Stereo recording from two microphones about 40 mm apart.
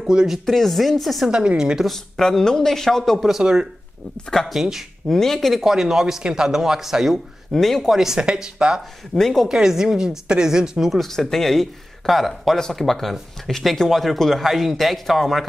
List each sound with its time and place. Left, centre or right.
0.0 s speech: centre
0.5 s speech: centre
1.2 s a woman's voice: right
1.9 s a man's voice: centre
4.5 s speech: centre
5.1 s a man's voice: centre
5.5 s speech: centre
7.5 s a man's voice: centre
7.8 s speech: centre
9.1 s a man's voice: centre
9.5 s speech: centre
10.9 s a man's voice: centre